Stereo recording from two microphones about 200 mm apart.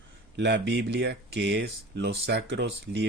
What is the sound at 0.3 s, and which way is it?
Speech, 60° right (ahead or behind).